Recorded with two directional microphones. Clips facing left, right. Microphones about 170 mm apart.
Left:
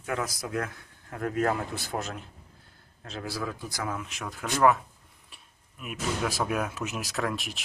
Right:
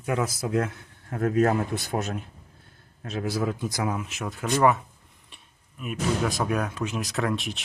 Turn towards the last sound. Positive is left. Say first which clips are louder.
# right 4 dB
turn(degrees=0)  # may be behind; listen again after turning